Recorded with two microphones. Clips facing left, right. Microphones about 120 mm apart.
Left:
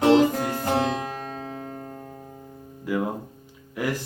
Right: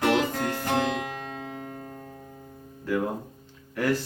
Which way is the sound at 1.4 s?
30° left (ahead or behind).